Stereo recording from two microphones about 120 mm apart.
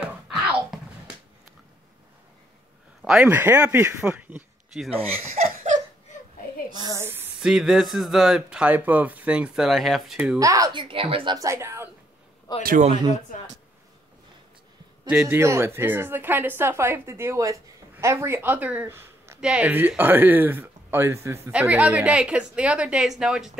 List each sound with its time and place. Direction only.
0.0 s wail: 10° right (ahead or behind)
3.0 s a woman's voice: 5° right (ahead or behind)
5.3 s laughter: 90° right
7.0 s a sound: 20° right (ahead or behind)
7.3 s speech: 5° right (ahead or behind)
10.4 s a woman's voice: 30° right (ahead or behind)
10.7 s speech: 45° right (ahead or behind)
11.3 s a woman's voice: 25° right (ahead or behind)
12.5 s a man's voice: 35° left (ahead or behind)
15.0 s a woman's voice: 15° right (ahead or behind)
19.4 s a woman's voice: 10° right (ahead or behind)